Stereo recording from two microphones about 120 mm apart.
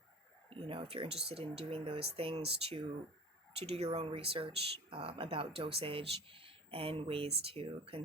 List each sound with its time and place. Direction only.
0.5 s speech: 50° right (ahead or behind)